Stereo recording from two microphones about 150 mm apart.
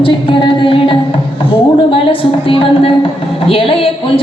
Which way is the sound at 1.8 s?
35° left (ahead or behind).